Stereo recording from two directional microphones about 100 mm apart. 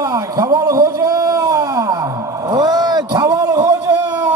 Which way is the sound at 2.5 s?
45° right (ahead or behind).